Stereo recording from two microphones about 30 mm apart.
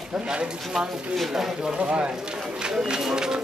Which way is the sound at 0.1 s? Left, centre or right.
Right.